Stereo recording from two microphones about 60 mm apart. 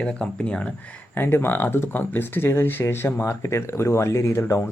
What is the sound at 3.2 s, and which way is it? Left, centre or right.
Speech, left.